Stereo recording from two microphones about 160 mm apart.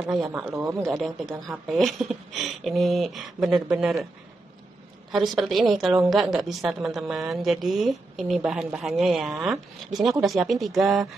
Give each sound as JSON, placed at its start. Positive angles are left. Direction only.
{"t": 0.0, "sound": "speech", "side_deg": -5}
{"t": 0.5, "sound": "speech", "side_deg": -20}
{"t": 0.8, "sound": "a woman's voice", "side_deg": 0}
{"t": 5.1, "sound": "a woman's voice", "side_deg": 0}